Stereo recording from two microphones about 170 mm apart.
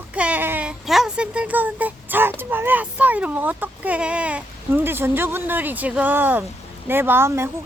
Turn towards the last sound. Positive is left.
turn(degrees=-15)  # may be behind; listen again after turning